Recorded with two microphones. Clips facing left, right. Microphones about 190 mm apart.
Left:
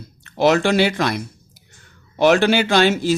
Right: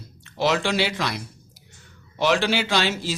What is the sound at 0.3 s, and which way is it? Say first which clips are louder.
Speech: left 7 dB; 50° left (ahead or behind).